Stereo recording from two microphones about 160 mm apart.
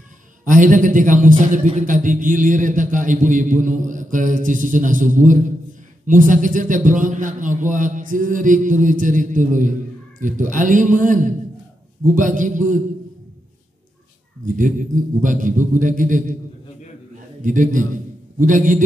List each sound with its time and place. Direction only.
0.5 s a man's voice: 55° right (ahead or behind)
14.4 s a man's voice: 55° right (ahead or behind)
17.4 s a man's voice: 55° right (ahead or behind)